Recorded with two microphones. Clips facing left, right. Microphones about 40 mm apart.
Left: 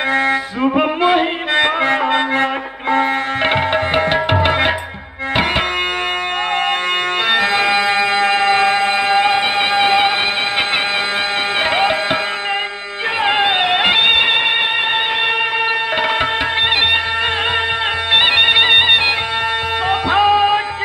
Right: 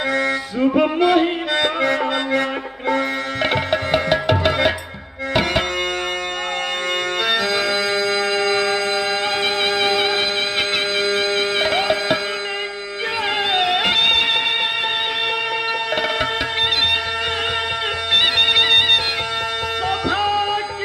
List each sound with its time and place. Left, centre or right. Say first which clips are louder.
0.1 s music: left 4 dB; left
7.2 s organ: left 6 dB; left
11.6 s music: left 3 dB; left
13.2 s music: left 5 dB; left
18.1 s music: left 4 dB; left